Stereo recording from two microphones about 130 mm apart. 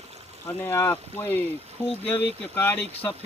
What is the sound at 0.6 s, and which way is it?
Speech, 20° left (ahead or behind).